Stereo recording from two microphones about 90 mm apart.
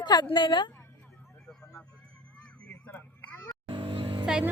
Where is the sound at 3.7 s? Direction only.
70° right (ahead or behind).